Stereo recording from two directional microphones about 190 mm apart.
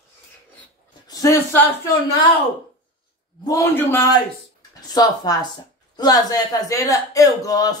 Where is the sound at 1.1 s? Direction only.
15° left (ahead or behind).